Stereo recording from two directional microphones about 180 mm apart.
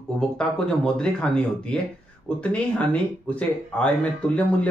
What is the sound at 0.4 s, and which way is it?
Speech, 5° left (ahead or behind).